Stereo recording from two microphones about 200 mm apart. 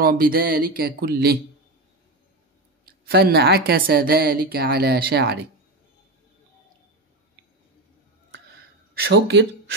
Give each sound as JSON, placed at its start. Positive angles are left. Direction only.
{"t": 0.0, "sound": "a woman's voice", "side_deg": -50}
{"t": 2.8, "sound": "a woman's voice", "side_deg": -50}
{"t": 8.9, "sound": "speech", "side_deg": -55}